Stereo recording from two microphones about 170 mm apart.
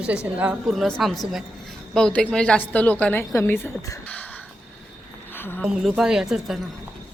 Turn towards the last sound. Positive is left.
turn(degrees=0)  # may be behind; listen again after turning